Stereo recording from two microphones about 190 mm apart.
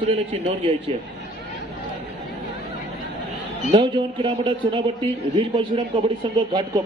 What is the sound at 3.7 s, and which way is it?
Speech, 25° right (ahead or behind).